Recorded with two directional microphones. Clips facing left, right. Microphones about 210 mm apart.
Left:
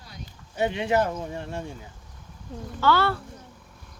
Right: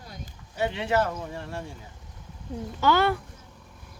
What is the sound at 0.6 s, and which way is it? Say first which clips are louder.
A child's voice: left 2 dB; 15° left (ahead or behind).